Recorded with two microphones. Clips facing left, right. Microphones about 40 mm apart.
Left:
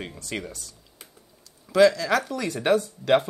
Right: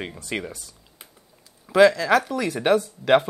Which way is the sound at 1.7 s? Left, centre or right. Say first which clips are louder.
Right 3 dB; centre.